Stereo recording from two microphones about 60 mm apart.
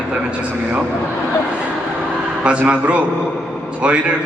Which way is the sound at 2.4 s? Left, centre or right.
Right.